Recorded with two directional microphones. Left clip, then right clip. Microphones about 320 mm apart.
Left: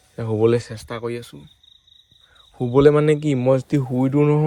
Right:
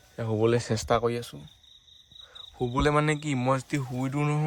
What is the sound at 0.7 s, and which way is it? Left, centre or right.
Speech, right.